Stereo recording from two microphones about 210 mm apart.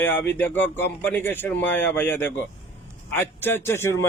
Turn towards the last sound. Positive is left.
turn(degrees=10)  # may be behind; listen again after turning